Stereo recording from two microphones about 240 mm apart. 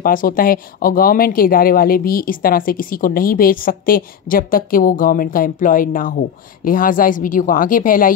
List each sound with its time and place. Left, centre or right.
0.0 s speech: left